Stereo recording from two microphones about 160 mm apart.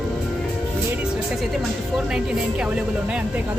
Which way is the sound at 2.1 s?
5° right (ahead or behind).